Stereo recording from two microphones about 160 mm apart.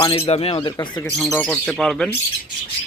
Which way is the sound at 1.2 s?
5° left (ahead or behind).